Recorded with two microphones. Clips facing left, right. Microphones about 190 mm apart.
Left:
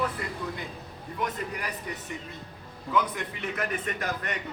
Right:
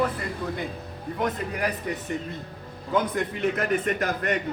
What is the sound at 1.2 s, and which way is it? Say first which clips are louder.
A man's voice: right 5 dB; 55° right (ahead or behind).